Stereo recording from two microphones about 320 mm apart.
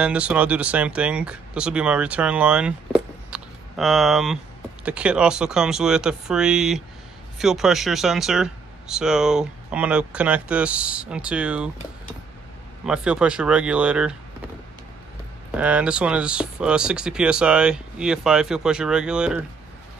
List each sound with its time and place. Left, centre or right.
0.0 s speech: centre
12.8 s speech: centre
15.5 s speech: centre